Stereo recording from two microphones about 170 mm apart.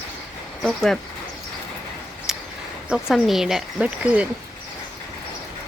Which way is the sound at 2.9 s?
Centre (ahead or behind).